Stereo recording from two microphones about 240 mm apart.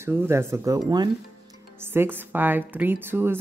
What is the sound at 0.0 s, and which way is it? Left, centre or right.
A woman's voice, centre.